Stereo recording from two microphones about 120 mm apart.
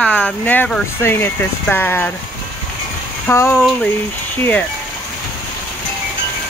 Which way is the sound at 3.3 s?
20° left (ahead or behind).